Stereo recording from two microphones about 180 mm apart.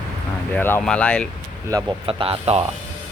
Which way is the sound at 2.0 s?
30° right (ahead or behind).